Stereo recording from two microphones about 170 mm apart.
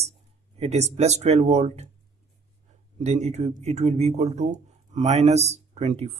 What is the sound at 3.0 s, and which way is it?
Speech, 40° right (ahead or behind).